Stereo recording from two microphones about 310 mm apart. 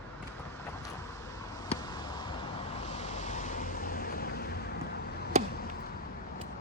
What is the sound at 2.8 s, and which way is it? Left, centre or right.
Vehicle, left.